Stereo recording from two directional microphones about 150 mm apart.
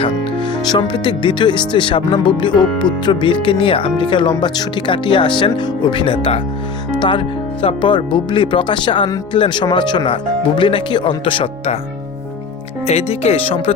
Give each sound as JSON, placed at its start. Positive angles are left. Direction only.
{"t": 0.7, "sound": "speech", "side_deg": 30}
{"t": 12.9, "sound": "speech", "side_deg": 45}